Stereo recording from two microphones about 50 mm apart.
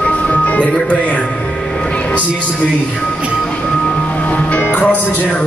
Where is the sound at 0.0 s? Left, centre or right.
Left.